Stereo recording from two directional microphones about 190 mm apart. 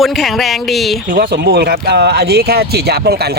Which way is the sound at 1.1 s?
50° right (ahead or behind).